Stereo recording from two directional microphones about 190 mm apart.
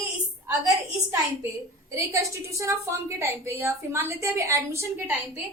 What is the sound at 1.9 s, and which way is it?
A woman's voice, 15° right (ahead or behind).